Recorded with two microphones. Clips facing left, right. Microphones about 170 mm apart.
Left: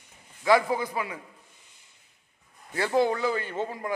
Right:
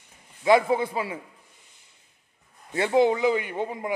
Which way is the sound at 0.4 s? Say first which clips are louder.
Right 3 dB; 20° right (ahead or behind).